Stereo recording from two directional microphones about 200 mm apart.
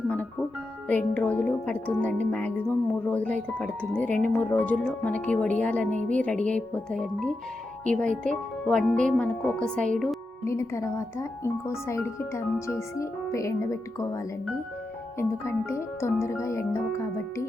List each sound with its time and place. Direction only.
0.9 s speech: 10° left (ahead or behind)
10.4 s speech: 15° left (ahead or behind)
15.2 s speech: 15° left (ahead or behind)